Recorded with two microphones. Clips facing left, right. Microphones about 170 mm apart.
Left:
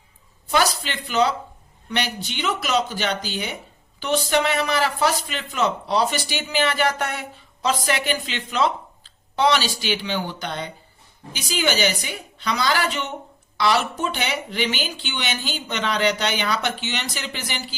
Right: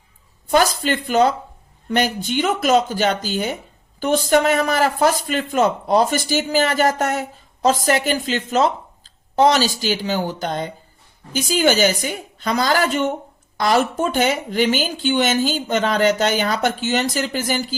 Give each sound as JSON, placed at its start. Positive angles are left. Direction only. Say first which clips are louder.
{"t": 0.4, "sound": "speech", "louder": "right 5 dB", "side_deg": -50}